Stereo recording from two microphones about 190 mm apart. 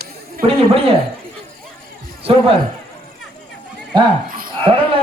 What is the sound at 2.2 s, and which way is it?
Speech, 30° right (ahead or behind).